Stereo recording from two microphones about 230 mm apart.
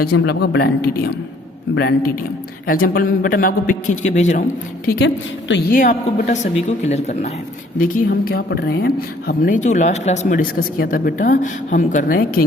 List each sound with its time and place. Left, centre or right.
0.0 s speech: left
4.9 s speech: left
5.7 s speech: left